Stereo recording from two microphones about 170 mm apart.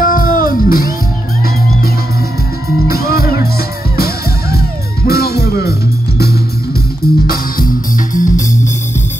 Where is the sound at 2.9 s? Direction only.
65° left (ahead or behind).